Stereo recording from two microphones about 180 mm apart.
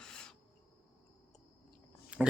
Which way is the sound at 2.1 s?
5° right (ahead or behind).